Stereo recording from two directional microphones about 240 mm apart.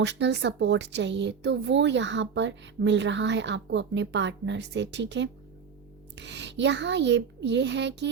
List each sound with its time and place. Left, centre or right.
0.0 s speech: right